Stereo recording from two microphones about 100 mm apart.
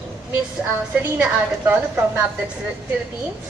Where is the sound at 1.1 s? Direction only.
15° right (ahead or behind).